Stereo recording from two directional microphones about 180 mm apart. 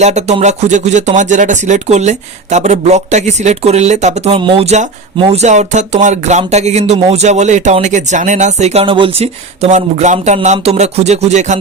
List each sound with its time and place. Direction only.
0.0 s speech: 40° right (ahead or behind)